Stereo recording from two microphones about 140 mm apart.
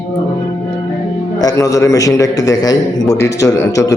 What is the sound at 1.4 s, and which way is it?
A man's voice, 25° left (ahead or behind).